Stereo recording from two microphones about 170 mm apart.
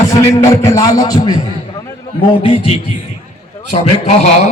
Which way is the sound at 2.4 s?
35° left (ahead or behind).